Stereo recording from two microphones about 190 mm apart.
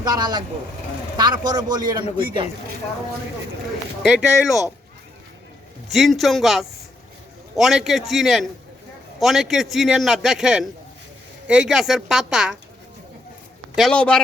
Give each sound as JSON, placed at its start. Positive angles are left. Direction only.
{"t": 0.0, "sound": "a man's voice", "side_deg": -20}
{"t": 4.0, "sound": "a man's voice", "side_deg": 0}
{"t": 5.9, "sound": "a man's voice", "side_deg": 0}
{"t": 13.7, "sound": "a man's voice", "side_deg": 5}